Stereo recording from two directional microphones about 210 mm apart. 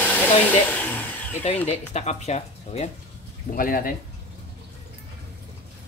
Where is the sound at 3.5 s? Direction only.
45° left (ahead or behind).